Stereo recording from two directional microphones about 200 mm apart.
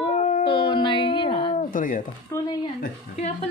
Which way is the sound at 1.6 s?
40° left (ahead or behind).